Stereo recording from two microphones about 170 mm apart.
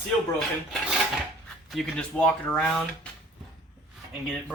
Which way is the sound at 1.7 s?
5° left (ahead or behind).